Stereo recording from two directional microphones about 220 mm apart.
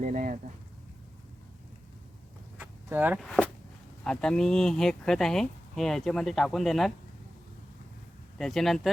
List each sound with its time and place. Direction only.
0.0 s speech: 35° right (ahead or behind)
2.6 s vehicle: 10° right (ahead or behind)
3.2 s speech: centre (ahead or behind)
8.4 s speech: centre (ahead or behind)